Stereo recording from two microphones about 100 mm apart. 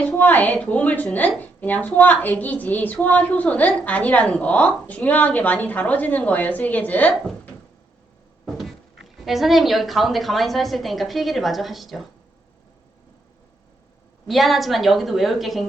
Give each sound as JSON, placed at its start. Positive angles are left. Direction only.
{"t": 0.2, "sound": "a woman's voice", "side_deg": 15}
{"t": 8.5, "sound": "speech", "side_deg": 0}
{"t": 14.3, "sound": "a woman's voice", "side_deg": 0}